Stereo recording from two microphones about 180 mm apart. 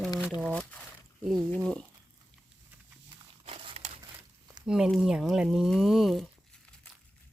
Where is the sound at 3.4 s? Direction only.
30° right (ahead or behind).